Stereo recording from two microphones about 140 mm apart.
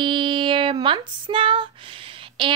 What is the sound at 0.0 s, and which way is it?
Female singing, 35° right (ahead or behind).